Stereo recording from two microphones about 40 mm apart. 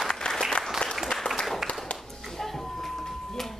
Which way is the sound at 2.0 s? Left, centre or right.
Centre.